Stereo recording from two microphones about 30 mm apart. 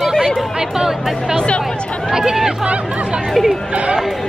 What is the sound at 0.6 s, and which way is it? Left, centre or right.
Speech, centre.